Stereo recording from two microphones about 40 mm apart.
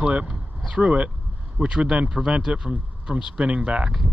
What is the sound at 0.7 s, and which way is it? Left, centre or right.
Speech, right.